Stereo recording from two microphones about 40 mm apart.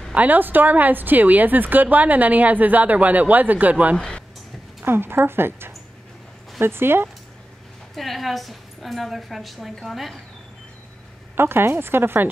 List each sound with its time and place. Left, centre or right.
0.1 s speech: right
4.8 s speech: right
7.9 s a woman's voice: centre
11.3 s speech: right